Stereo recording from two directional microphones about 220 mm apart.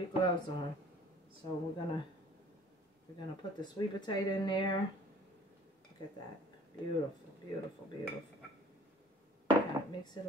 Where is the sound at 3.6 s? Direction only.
20° left (ahead or behind).